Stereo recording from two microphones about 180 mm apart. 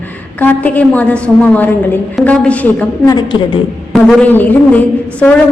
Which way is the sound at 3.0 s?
20° left (ahead or behind).